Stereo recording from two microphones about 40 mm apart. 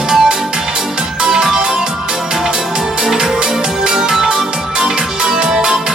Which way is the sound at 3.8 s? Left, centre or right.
Centre.